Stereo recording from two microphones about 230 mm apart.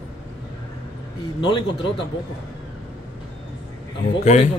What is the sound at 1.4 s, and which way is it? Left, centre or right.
Speech, left.